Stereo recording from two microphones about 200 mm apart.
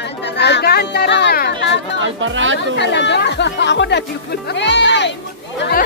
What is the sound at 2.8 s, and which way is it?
Speech, 60° left (ahead or behind).